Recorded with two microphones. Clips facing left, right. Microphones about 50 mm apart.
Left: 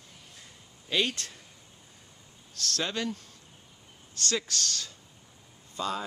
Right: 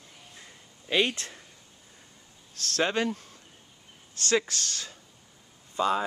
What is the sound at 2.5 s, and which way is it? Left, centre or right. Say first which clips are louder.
Speech: right 5 dB; right.